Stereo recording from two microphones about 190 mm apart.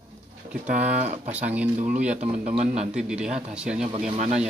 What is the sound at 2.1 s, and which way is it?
Speech, 35° right (ahead or behind).